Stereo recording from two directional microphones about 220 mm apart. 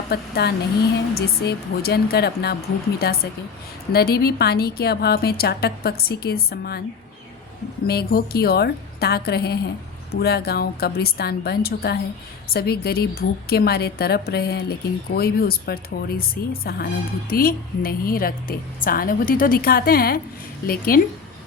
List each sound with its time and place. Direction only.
0.1 s a woman's voice: 45° left (ahead or behind)
7.9 s a woman's voice: 45° left (ahead or behind)